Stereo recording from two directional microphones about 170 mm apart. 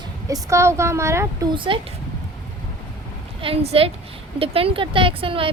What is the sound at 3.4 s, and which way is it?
Speech, 35° right (ahead or behind).